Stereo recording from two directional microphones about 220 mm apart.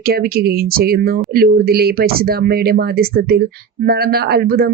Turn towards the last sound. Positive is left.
turn(degrees=-45)  # may be behind; listen again after turning